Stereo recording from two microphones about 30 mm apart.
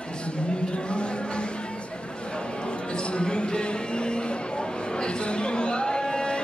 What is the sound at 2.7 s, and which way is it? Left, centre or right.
Basketball bounce, left.